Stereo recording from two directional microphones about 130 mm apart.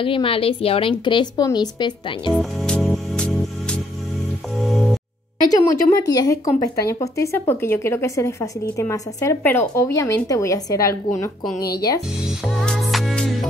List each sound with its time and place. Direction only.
0.0 s a woman's voice: 45° left (ahead or behind)
1.0 s speech: 35° left (ahead or behind)
2.3 s music: 5° left (ahead or behind)
5.4 s speech: 30° left (ahead or behind)
12.4 s music: centre (ahead or behind)